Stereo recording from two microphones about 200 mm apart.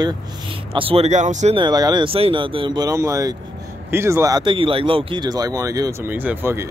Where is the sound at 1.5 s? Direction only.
20° right (ahead or behind).